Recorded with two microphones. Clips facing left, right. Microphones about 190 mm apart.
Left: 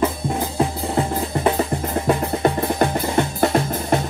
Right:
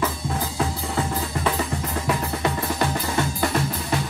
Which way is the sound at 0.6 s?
35° left (ahead or behind).